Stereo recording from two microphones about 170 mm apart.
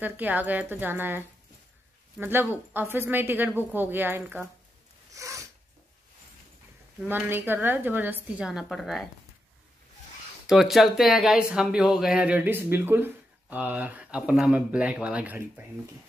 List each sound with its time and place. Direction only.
0.0 s speech: 10° right (ahead or behind)
5.1 s a sound: 20° right (ahead or behind)
7.1 s speech: 10° right (ahead or behind)
10.4 s speech: centre (ahead or behind)